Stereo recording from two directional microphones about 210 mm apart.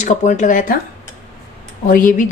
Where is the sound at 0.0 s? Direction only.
35° left (ahead or behind).